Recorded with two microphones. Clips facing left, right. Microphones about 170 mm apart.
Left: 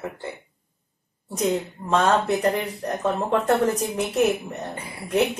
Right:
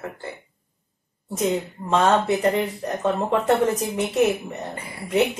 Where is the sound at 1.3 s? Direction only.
Centre (ahead or behind).